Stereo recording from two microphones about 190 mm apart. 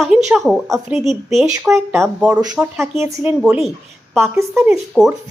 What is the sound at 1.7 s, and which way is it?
Speech, 15° right (ahead or behind).